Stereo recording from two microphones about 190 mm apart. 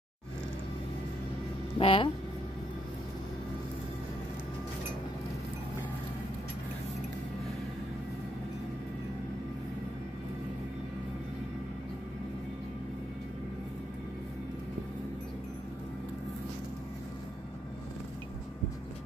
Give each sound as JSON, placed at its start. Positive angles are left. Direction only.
{"t": 1.8, "sound": "speech", "side_deg": 30}